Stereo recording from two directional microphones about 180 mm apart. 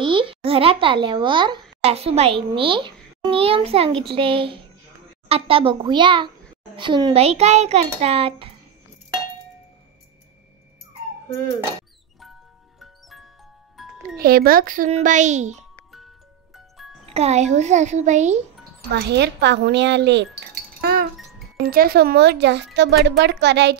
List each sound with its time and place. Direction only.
0.0 s a child's voice: 30° right (ahead or behind)
12.7 s music: centre (ahead or behind)
14.1 s a child's voice: 55° right (ahead or behind); by 15.6 s 40° right (ahead or behind)
16.5 s music: centre (ahead or behind)
17.1 s a child's voice: 35° right (ahead or behind)
18.9 s speech: 70° right (ahead or behind)